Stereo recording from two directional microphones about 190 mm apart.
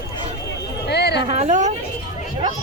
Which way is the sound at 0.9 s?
60° left (ahead or behind).